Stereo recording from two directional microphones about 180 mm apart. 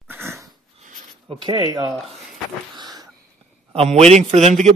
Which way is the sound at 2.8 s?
20° right (ahead or behind).